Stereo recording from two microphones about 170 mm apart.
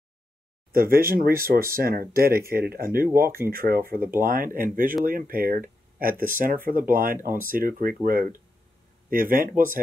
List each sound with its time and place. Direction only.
0.7 s speech: 60° right (ahead or behind)